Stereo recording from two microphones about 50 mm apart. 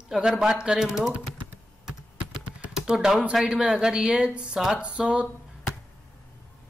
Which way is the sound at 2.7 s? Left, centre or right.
Centre.